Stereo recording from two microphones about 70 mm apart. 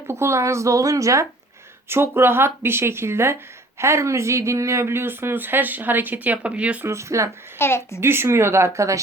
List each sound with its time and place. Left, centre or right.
0.1 s speech: right
1.9 s speech: right; by 6.8 s centre
6.8 s speech: right
7.6 s a woman's voice: left
8.0 s speech: right